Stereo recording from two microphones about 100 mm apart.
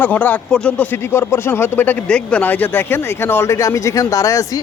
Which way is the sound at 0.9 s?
25° left (ahead or behind).